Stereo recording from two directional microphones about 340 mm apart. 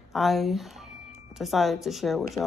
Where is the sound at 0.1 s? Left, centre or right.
Centre.